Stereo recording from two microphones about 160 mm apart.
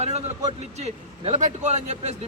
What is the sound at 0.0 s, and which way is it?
A man's voice, 45° right (ahead or behind).